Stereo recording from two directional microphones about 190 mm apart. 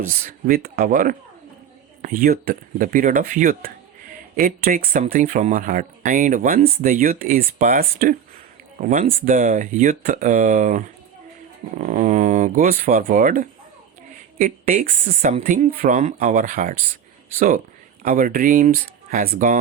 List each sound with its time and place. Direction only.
0.0 s speech: 45° right (ahead or behind)